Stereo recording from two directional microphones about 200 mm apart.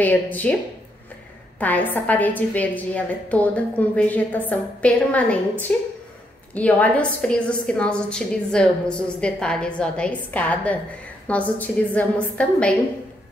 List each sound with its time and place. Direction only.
0.0 s a woman's voice: 10° left (ahead or behind)
1.6 s a woman's voice: 10° left (ahead or behind)